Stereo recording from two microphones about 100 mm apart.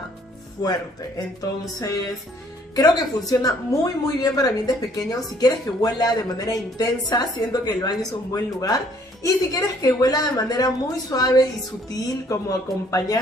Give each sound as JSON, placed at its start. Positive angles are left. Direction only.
{"t": 0.6, "sound": "speech", "side_deg": 40}